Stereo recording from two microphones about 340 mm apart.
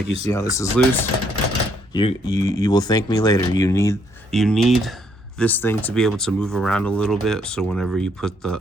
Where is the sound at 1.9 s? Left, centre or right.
Centre.